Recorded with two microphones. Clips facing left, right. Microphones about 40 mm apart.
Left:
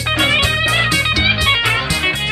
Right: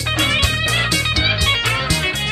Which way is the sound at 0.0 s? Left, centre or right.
Centre.